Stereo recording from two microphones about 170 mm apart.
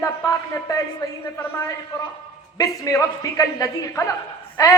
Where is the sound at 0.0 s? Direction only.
20° left (ahead or behind).